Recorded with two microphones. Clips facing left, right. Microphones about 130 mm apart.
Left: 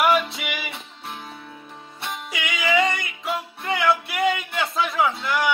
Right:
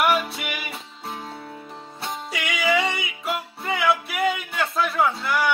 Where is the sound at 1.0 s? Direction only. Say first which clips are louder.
Right 3 dB; 30° right (ahead or behind).